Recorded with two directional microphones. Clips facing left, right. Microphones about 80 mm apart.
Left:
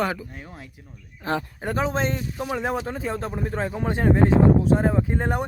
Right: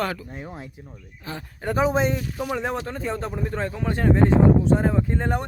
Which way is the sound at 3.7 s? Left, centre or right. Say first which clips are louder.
Left 1 dB; left.